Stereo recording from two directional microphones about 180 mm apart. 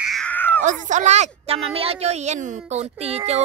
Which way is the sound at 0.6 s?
40° right (ahead or behind).